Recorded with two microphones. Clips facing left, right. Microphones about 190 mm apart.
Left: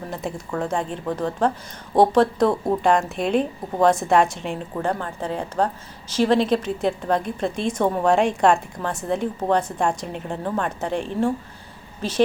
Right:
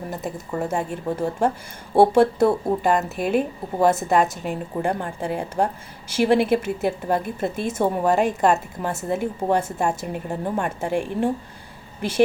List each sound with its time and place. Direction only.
0.1 s a woman's voice: centre (ahead or behind)
4.8 s a woman's voice: 15° right (ahead or behind)